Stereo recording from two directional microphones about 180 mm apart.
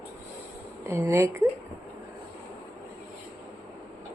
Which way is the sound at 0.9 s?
15° right (ahead or behind).